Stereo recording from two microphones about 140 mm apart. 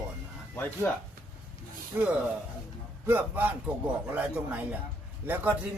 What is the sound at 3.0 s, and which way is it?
Speech, 15° right (ahead or behind).